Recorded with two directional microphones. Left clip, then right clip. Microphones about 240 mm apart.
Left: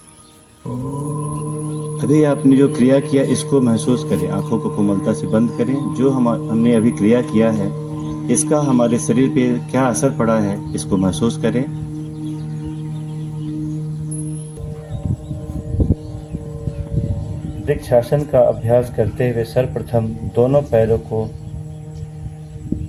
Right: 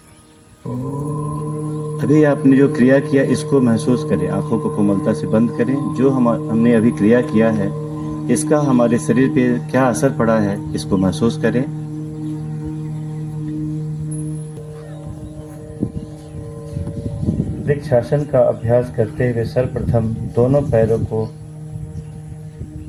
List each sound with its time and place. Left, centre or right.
1.0 s speech: centre
17.8 s speech: left